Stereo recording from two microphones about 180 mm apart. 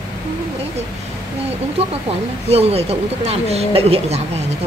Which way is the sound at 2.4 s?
35° right (ahead or behind).